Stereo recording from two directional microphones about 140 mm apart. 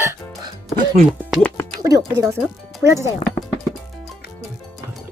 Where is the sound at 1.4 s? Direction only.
10° left (ahead or behind).